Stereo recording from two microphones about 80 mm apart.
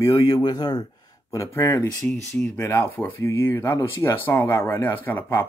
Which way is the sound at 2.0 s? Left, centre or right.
Centre.